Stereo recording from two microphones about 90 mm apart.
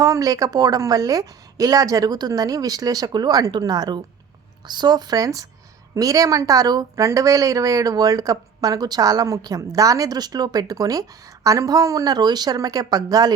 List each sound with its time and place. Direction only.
0.0 s a woman's voice: 40° right (ahead or behind)